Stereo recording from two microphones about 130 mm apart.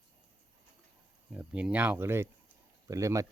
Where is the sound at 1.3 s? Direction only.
10° right (ahead or behind).